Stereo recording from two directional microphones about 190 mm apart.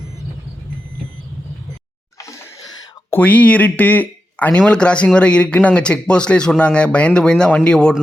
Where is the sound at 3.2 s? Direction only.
10° left (ahead or behind).